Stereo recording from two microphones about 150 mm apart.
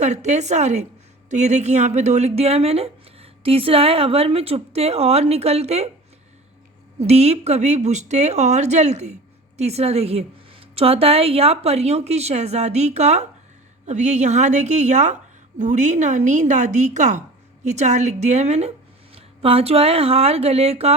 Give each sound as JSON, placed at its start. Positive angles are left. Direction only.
{"t": 0.0, "sound": "speech", "side_deg": -50}
{"t": 7.0, "sound": "speech", "side_deg": -45}